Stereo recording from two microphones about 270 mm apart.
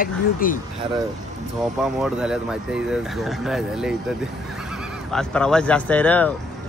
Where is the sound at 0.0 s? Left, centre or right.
Left.